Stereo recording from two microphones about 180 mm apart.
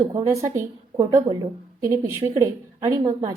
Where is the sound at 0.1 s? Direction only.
20° right (ahead or behind).